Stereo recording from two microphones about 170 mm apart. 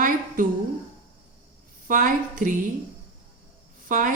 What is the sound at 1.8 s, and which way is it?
Speech, 50° right (ahead or behind).